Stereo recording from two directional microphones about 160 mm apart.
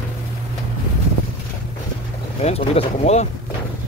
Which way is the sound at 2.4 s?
40° left (ahead or behind).